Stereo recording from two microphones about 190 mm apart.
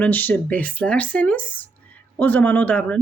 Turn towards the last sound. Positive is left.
turn(degrees=10)  # may be behind; listen again after turning